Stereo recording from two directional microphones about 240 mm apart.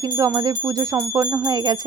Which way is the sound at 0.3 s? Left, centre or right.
Centre.